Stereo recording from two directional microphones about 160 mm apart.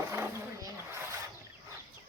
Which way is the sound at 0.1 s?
15° right (ahead or behind).